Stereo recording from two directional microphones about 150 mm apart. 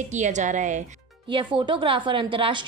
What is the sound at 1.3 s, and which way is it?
A woman's voice, 30° right (ahead or behind).